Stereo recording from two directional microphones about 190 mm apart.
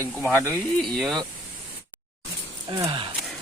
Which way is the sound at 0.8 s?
Centre (ahead or behind).